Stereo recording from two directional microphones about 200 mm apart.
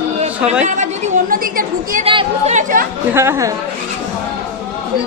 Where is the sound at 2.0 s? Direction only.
30° right (ahead or behind).